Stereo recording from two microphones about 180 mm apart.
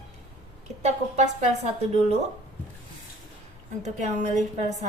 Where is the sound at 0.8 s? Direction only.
40° right (ahead or behind).